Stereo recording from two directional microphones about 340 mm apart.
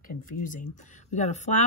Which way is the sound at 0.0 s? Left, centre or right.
Left.